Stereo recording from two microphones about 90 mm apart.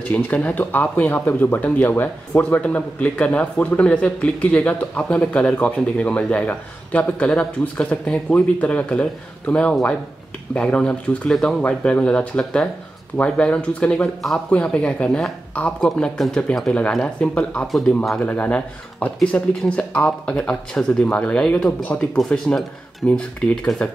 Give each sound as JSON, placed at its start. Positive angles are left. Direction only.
{"t": 0.1, "sound": "speech", "side_deg": 15}
{"t": 17.6, "sound": "speech", "side_deg": 0}
{"t": 18.2, "sound": "speech", "side_deg": 20}